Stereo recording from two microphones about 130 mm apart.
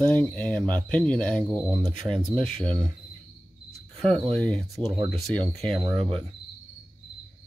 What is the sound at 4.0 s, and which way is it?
Speech, 5° left (ahead or behind).